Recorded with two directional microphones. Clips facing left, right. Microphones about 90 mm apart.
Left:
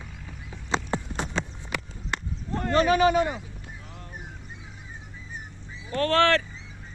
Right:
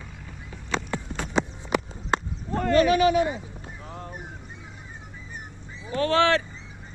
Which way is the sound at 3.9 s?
35° right (ahead or behind).